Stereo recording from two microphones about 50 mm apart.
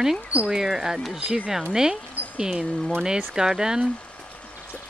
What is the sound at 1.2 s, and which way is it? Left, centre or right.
Speech, right.